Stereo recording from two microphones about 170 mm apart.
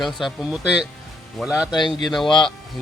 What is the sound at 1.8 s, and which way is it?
Speech, 25° left (ahead or behind).